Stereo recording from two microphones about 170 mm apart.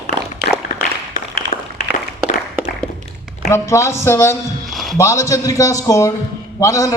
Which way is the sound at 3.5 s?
15° left (ahead or behind).